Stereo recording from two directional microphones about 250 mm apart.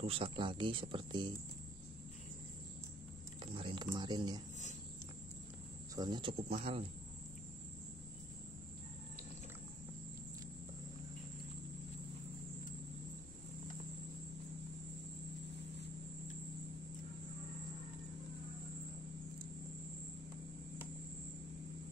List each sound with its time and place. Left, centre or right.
0.0 s speech: right
3.5 s speech: centre
5.9 s speech: centre